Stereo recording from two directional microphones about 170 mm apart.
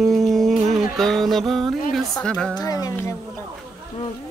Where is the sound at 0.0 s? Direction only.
Centre (ahead or behind).